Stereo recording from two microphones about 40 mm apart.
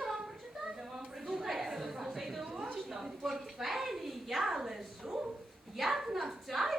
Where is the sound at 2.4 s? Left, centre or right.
Right.